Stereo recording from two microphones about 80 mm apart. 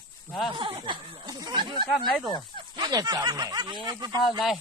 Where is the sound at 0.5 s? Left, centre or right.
Right.